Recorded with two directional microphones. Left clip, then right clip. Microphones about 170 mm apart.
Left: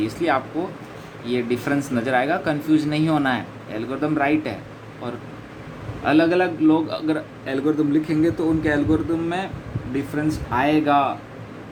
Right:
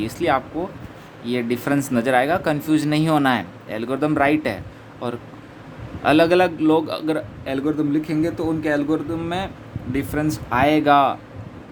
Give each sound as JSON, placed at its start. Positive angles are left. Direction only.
{"t": 0.0, "sound": "a man's voice", "side_deg": -35}
{"t": 9.9, "sound": "speech", "side_deg": -55}